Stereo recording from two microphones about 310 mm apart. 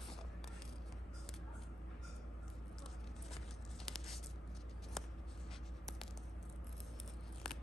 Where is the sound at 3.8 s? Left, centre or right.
Centre.